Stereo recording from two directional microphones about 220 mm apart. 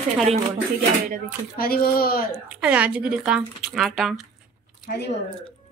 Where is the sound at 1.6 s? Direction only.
45° left (ahead or behind).